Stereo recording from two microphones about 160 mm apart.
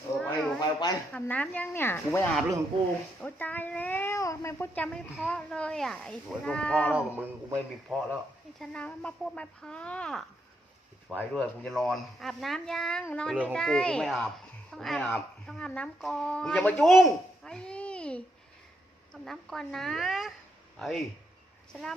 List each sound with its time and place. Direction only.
0.2 s a sound: 5° left (ahead or behind)
0.6 s speech: 25° left (ahead or behind)
1.1 s speech: 10° left (ahead or behind)
6.9 s a man's voice: 10° right (ahead or behind)
8.5 s speech: 5° left (ahead or behind)
11.3 s speech: 5° left (ahead or behind)